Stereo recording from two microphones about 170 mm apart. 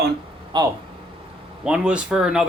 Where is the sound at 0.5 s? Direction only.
25° right (ahead or behind).